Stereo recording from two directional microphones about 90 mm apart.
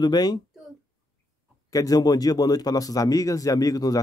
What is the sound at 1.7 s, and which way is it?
A man's voice, 45° left (ahead or behind).